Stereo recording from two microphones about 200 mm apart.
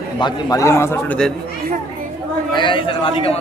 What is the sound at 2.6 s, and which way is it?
Speech, 25° left (ahead or behind).